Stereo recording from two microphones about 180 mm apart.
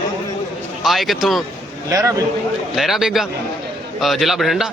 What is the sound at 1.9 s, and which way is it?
Speech, 15° right (ahead or behind).